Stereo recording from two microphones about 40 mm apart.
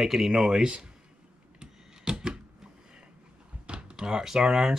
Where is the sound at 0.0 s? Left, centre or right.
Centre.